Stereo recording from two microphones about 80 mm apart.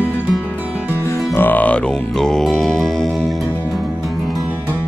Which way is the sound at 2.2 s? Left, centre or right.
Centre.